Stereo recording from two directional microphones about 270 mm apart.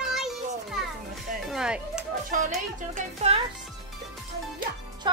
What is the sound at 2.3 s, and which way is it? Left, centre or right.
Speech, right.